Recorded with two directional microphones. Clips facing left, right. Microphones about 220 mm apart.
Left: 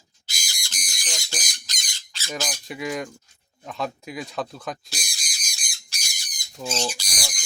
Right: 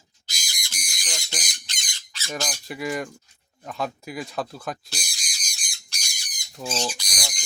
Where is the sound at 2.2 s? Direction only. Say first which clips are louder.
Even; 5° left (ahead or behind).